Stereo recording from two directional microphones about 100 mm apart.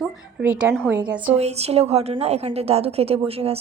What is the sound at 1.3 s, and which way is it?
A woman's voice, 90° right.